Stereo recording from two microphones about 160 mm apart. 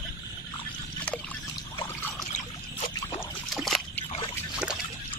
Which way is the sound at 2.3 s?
45° left (ahead or behind).